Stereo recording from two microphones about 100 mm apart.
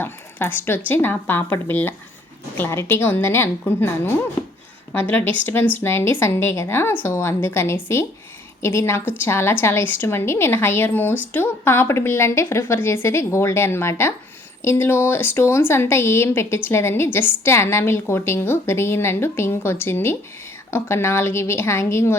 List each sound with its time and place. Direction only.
0.0 s speech: 20° left (ahead or behind)